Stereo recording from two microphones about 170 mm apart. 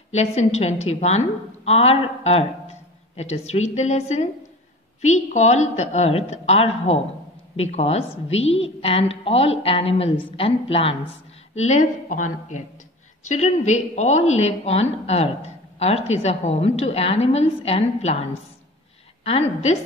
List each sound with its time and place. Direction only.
0.1 s a woman's voice: 40° left (ahead or behind)
19.2 s a woman's voice: 40° left (ahead or behind)